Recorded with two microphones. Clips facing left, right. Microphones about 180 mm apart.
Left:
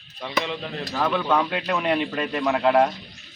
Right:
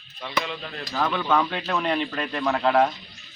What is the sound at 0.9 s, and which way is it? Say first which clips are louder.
A man's voice: left 1 dB; 5° left (ahead or behind).